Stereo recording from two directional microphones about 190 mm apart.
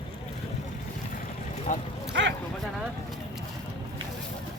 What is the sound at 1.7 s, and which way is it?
Speech, 45° left (ahead or behind).